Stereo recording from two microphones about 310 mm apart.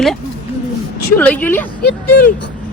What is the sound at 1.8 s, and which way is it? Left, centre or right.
Speech, left.